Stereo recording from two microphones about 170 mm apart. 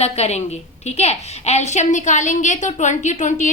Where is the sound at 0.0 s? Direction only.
40° left (ahead or behind).